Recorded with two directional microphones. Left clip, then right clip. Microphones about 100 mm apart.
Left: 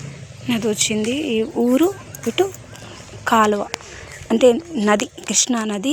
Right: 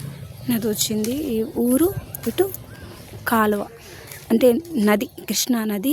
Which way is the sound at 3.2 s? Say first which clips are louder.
Left 4 dB; 35° right (ahead or behind).